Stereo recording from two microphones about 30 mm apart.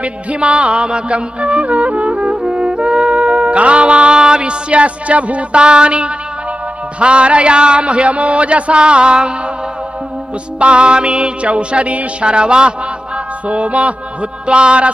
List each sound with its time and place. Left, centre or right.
0.0 s music: right
5.6 s a man's voice: right
10.6 s a man's voice: right
12.3 s a man's voice: right
13.5 s music: right
14.4 s a man's voice: right